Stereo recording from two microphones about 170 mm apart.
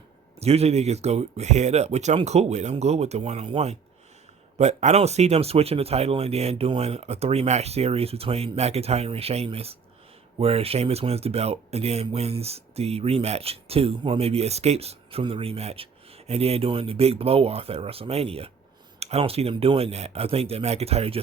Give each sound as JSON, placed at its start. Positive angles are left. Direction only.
{"t": 0.3, "sound": "speech", "side_deg": -40}